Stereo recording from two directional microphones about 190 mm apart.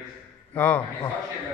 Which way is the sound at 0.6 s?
5° left (ahead or behind).